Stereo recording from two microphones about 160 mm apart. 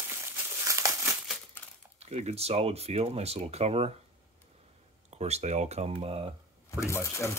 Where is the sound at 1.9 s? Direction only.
40° right (ahead or behind).